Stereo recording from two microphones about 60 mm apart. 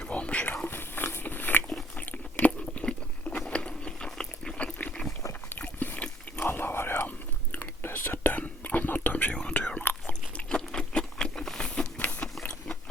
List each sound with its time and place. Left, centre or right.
0.0 s a sound: left
0.4 s biting: left; by 5.0 s centre
5.8 s a sound: left
6.3 s whispering: left
10.1 s patter: centre
12.2 s biting: centre